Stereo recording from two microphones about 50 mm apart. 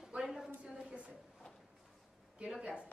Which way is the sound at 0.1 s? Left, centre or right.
Right.